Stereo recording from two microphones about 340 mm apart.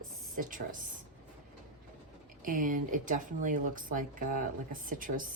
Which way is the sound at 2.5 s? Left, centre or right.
Right.